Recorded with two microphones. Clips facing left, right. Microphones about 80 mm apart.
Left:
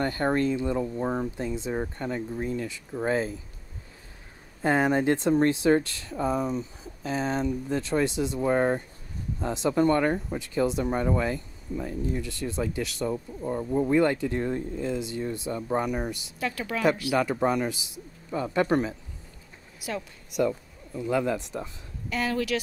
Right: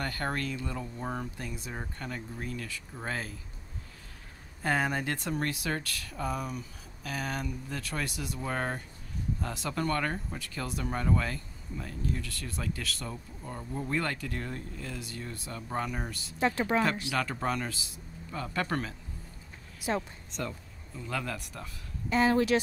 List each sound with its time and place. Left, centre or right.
0.0 s speech: left
4.6 s speech: left
16.3 s speech: right
17.1 s speech: centre
20.2 s speech: centre
22.1 s speech: right